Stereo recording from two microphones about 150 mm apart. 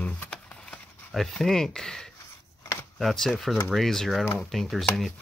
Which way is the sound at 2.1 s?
20° left (ahead or behind).